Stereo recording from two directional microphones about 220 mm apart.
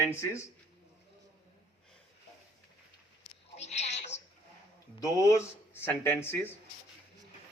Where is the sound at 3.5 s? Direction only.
30° left (ahead or behind).